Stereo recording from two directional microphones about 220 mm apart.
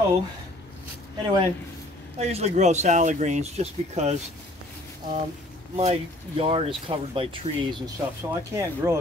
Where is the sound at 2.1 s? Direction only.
30° right (ahead or behind).